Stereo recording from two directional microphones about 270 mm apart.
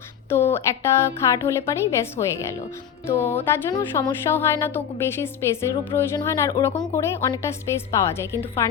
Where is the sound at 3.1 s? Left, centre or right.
Left.